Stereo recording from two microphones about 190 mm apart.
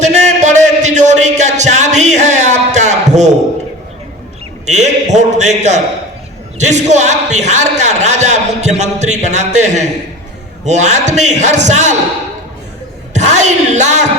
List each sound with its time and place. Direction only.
0.0 s a sound: 40° right (ahead or behind)
4.6 s a man's voice: 35° right (ahead or behind)
13.1 s a woman's voice: 40° right (ahead or behind)